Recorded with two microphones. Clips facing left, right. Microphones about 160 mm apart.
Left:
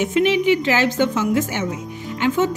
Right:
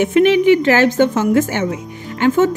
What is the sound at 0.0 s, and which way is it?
A woman's voice, 55° right (ahead or behind).